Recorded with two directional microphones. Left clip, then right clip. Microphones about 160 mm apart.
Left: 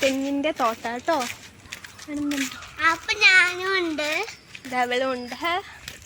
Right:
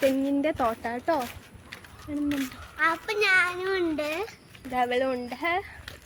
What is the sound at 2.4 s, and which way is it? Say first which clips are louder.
A child's voice: left 5 dB; 70° right (ahead or behind).